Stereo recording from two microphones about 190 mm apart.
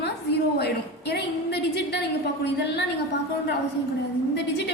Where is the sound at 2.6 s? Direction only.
65° left (ahead or behind).